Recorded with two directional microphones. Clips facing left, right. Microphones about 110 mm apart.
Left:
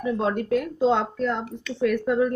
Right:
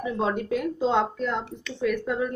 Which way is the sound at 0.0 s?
5° right (ahead or behind).